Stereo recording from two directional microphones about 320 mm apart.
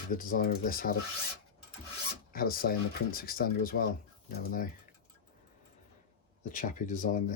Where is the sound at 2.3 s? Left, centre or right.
Left.